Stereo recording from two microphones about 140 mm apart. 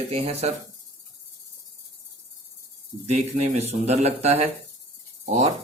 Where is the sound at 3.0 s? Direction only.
50° right (ahead or behind).